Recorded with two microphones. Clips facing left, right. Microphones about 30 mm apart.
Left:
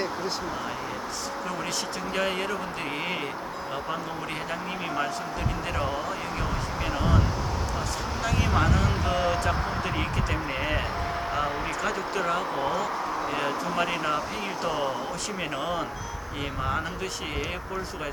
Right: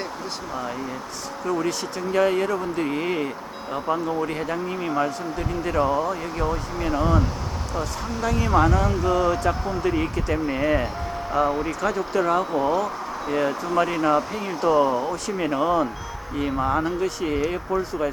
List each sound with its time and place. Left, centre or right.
1.5 s speech: centre
3.8 s speech: centre
5.7 s speech: centre
9.0 s speech: left
9.8 s speech: centre
11.8 s speech: centre
17.2 s speech: centre